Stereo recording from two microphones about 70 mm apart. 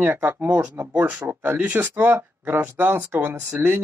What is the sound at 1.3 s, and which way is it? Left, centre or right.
Speech, right.